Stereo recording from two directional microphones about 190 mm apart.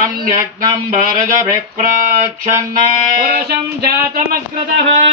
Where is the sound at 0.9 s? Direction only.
45° right (ahead or behind).